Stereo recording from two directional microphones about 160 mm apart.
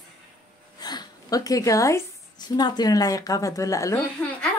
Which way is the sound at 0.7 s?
25° left (ahead or behind).